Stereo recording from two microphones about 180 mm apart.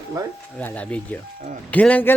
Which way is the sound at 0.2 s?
20° right (ahead or behind).